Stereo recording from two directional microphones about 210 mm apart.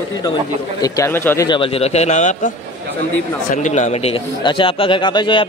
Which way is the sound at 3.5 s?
35° left (ahead or behind).